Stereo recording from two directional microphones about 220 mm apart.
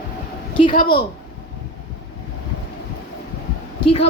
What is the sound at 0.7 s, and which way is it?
Speech, 40° left (ahead or behind).